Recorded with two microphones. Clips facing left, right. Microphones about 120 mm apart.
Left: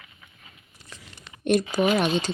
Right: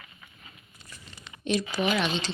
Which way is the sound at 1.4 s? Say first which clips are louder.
Left 6 dB; 50° left (ahead or behind).